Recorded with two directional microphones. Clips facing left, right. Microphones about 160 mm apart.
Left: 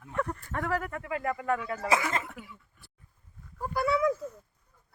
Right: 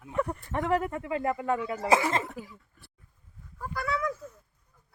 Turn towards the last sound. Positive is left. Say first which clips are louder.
# left 5 dB
turn(degrees=25)  # may be behind; listen again after turning